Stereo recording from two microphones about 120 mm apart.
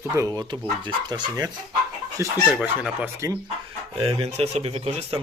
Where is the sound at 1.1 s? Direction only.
35° right (ahead or behind).